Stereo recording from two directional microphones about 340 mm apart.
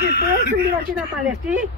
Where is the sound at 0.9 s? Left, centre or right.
Centre.